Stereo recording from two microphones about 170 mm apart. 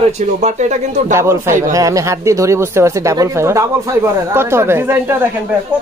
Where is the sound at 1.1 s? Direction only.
15° right (ahead or behind).